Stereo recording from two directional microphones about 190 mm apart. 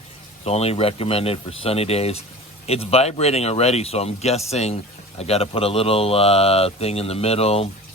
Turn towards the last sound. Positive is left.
turn(degrees=30)  # may be behind; listen again after turning